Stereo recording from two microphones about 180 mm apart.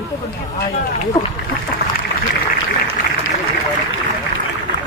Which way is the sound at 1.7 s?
55° left (ahead or behind).